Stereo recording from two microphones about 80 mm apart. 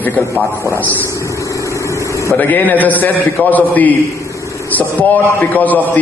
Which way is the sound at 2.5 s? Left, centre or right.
Left.